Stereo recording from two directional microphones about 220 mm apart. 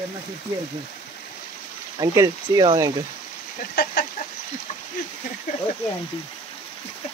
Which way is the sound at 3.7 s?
40° left (ahead or behind).